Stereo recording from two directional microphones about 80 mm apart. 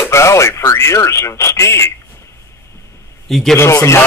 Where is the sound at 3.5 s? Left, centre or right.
Left.